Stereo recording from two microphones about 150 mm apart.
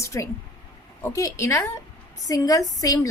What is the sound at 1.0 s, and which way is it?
A woman's voice, 20° left (ahead or behind).